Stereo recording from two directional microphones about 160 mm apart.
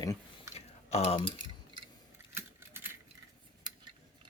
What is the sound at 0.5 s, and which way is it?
Typing, 40° left (ahead or behind).